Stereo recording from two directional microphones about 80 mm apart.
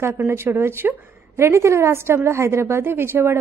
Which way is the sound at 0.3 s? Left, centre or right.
Right.